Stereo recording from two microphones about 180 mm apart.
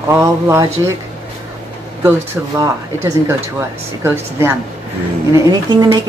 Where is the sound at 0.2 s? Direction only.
20° right (ahead or behind).